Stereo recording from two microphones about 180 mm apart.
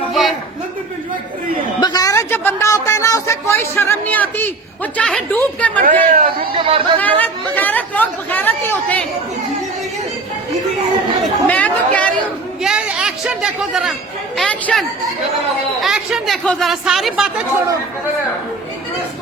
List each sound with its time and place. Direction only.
0.1 s a sound: centre (ahead or behind)
1.8 s a man's voice: 20° left (ahead or behind)
5.8 s speech: 50° right (ahead or behind)
6.5 s speech: 30° right (ahead or behind)
7.0 s speech: 10° left (ahead or behind)
11.2 s chatter: 10° left (ahead or behind)
12.6 s speech: 5° right (ahead or behind)